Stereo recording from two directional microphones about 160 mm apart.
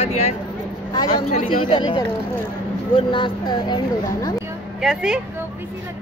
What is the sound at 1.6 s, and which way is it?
Speech, 30° left (ahead or behind).